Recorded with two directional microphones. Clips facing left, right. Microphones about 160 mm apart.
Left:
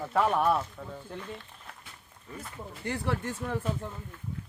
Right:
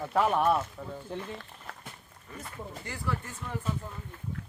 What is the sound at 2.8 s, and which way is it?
Speech, 65° left (ahead or behind).